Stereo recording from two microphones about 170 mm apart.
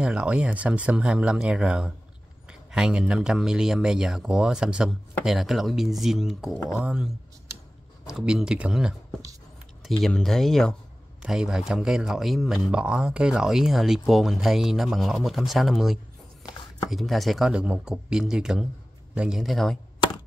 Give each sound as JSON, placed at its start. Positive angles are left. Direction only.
{"t": 0.0, "sound": "speech", "side_deg": -5}
{"t": 6.5, "sound": "speech", "side_deg": 10}
{"t": 6.8, "sound": "speech", "side_deg": -5}
{"t": 8.1, "sound": "speech", "side_deg": -5}